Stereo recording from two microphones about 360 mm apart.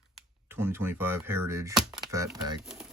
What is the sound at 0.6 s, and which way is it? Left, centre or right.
Computer keyboard, centre.